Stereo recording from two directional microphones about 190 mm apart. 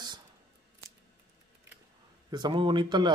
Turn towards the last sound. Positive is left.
turn(degrees=-25)  # may be behind; listen again after turning